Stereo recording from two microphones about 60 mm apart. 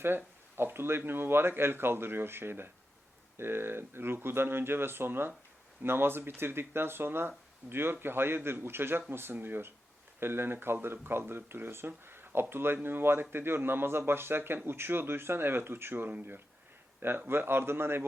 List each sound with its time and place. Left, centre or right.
0.0 s speech: right